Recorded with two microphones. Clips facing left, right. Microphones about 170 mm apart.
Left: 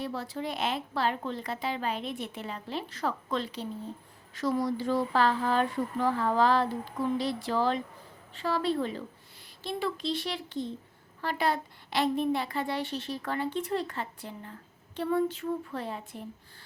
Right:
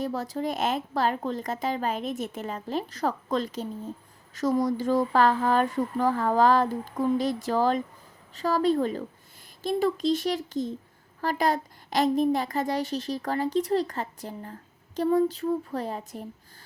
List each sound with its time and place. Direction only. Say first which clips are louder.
0.0 s a woman's voice: right 5 dB; 40° right (ahead or behind)